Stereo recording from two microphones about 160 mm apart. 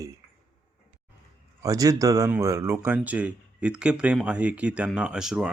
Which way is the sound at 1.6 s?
20° right (ahead or behind).